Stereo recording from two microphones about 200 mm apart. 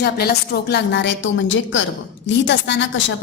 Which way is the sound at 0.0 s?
50° left (ahead or behind).